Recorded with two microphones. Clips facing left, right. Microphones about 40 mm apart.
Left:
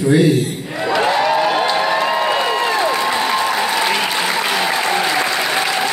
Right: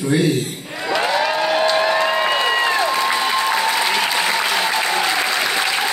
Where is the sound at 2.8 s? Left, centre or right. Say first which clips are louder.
Left 1 dB; centre.